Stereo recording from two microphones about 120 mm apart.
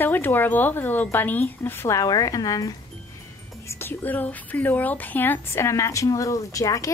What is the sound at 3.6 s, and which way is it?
A woman's voice, 20° left (ahead or behind).